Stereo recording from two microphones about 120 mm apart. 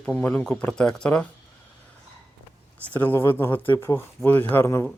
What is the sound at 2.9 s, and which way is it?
Speech, 15° left (ahead or behind).